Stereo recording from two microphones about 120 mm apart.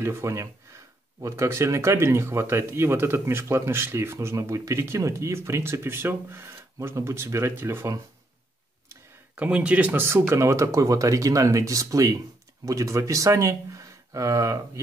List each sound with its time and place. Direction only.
0.0 s speech: 25° right (ahead or behind)
9.3 s speech: 10° right (ahead or behind); by 14.6 s 30° right (ahead or behind)